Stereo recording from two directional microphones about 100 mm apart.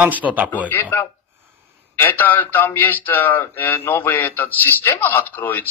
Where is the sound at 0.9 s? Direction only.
20° left (ahead or behind).